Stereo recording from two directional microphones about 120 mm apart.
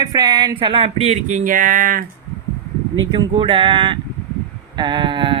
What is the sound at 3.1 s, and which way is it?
Speech, 45° right (ahead or behind).